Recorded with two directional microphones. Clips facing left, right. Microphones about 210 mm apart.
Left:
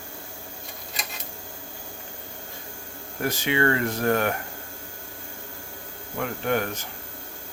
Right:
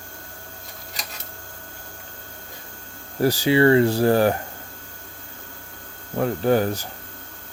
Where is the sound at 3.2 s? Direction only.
35° right (ahead or behind).